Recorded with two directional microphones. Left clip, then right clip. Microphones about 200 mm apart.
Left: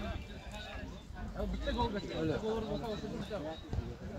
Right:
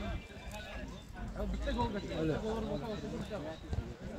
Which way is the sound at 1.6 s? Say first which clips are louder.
Left 1 dB; 35° left (ahead or behind).